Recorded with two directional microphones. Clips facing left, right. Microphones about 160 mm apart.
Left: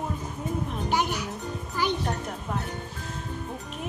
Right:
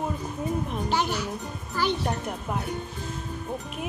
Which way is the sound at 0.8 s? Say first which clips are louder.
Left 1 dB; 15° left (ahead or behind).